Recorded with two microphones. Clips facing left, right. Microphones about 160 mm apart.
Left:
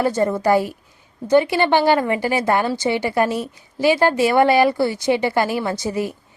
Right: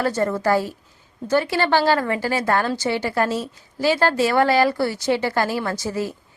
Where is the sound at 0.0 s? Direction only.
15° left (ahead or behind).